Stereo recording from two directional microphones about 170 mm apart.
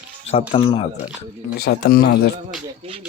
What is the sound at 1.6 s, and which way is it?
Speech, 65° left (ahead or behind).